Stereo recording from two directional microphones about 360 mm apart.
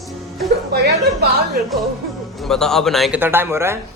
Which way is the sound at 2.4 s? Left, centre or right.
Centre.